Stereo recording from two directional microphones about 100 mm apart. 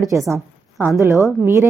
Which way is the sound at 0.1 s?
25° right (ahead or behind).